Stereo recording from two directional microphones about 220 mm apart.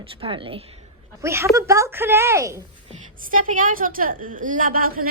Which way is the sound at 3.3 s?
40° right (ahead or behind).